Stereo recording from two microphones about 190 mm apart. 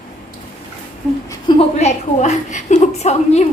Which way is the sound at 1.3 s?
25° left (ahead or behind).